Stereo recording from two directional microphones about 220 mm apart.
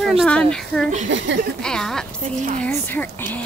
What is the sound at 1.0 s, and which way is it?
Speech, 55° right (ahead or behind).